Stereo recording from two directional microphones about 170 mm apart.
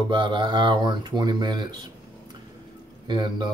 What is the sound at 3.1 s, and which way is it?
Speech, 25° right (ahead or behind).